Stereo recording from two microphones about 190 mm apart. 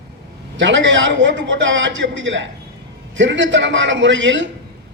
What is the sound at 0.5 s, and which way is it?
A man's voice, 75° right (ahead or behind).